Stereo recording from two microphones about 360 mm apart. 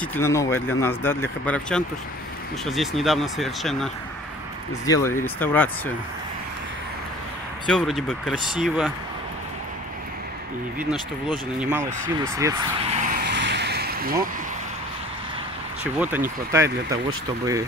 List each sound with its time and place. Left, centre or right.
0.0 s speech: centre
7.6 s speech: centre
10.8 s speech: centre
12.4 s vehicle: centre; by 14.1 s right
15.8 s speech: centre